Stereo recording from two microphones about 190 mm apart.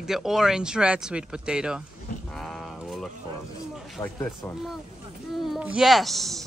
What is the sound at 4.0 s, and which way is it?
Speech, 15° left (ahead or behind).